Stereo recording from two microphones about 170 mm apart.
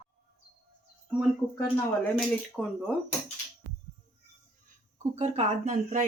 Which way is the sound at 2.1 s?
5° left (ahead or behind).